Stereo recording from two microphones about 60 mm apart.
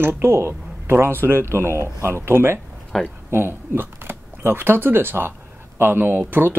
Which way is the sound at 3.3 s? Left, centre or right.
Right.